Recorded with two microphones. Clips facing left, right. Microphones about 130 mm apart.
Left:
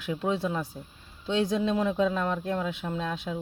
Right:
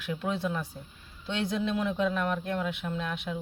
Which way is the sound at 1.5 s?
25° left (ahead or behind).